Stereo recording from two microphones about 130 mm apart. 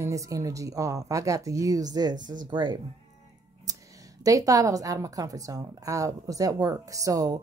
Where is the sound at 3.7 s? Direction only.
30° right (ahead or behind).